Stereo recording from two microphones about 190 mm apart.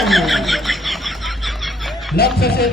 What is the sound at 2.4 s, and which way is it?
Music, 55° left (ahead or behind).